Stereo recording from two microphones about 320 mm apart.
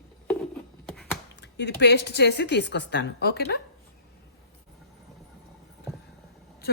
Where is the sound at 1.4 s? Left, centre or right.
Left.